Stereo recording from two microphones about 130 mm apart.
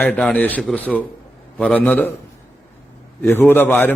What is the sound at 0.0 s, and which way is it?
A man's voice, 10° left (ahead or behind).